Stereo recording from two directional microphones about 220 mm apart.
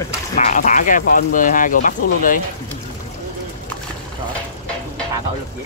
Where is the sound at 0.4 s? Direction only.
35° left (ahead or behind).